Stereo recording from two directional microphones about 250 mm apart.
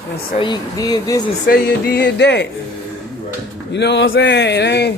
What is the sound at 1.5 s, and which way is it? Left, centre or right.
Speech, left.